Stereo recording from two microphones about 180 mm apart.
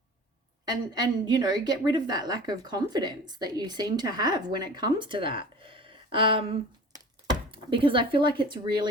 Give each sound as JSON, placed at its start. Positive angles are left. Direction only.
{"t": 0.7, "sound": "a woman's voice", "side_deg": -25}